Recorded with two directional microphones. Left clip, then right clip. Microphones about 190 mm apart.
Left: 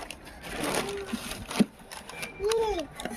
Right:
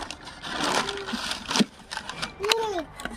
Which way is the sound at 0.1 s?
25° right (ahead or behind).